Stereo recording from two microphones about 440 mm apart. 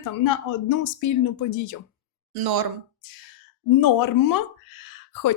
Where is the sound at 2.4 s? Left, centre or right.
Right.